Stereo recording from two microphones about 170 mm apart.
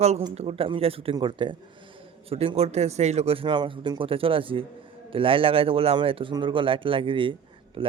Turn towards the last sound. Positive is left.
turn(degrees=-30)  # may be behind; listen again after turning